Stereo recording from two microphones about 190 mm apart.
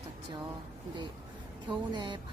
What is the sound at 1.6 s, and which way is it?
Speech, 25° right (ahead or behind).